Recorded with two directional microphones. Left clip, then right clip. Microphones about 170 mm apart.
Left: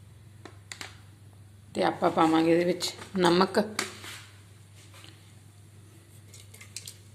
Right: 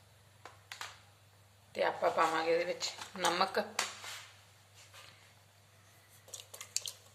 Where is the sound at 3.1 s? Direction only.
10° left (ahead or behind).